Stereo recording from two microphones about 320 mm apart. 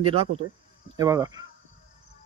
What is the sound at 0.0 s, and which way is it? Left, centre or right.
A man's voice, centre.